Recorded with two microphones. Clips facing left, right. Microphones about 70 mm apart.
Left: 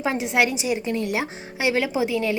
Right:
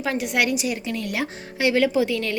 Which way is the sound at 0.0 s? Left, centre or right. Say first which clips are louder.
Left 1 dB; left.